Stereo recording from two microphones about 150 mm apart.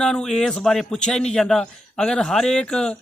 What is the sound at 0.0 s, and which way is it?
Speech, 5° left (ahead or behind).